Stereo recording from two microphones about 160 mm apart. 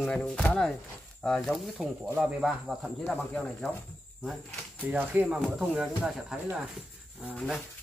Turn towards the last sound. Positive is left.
turn(degrees=0)  # may be behind; listen again after turning